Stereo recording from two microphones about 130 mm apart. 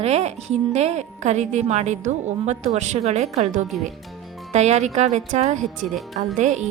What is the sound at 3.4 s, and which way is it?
A woman's voice, 70° right (ahead or behind).